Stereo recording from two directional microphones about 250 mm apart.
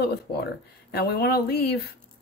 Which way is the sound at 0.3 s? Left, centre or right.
Left.